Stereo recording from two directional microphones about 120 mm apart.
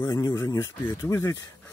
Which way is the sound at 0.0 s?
30° left (ahead or behind).